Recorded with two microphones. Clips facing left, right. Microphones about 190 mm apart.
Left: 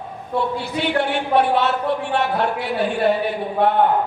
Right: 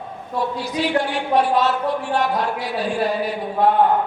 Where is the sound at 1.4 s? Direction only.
60° left (ahead or behind).